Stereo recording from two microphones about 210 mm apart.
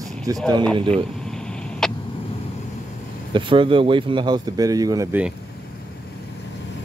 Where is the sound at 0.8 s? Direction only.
25° right (ahead or behind).